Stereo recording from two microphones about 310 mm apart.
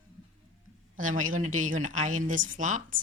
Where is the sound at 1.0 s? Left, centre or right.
Right.